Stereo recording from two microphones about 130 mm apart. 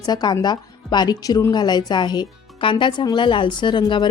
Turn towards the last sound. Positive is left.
turn(degrees=35)  # may be behind; listen again after turning